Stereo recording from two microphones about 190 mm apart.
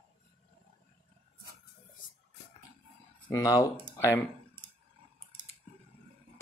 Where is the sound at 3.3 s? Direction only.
20° left (ahead or behind).